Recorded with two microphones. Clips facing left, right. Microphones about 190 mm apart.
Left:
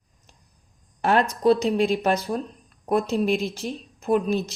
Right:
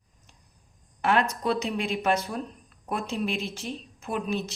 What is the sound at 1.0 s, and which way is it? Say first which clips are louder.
A woman's voice: left 5 dB; 35° left (ahead or behind).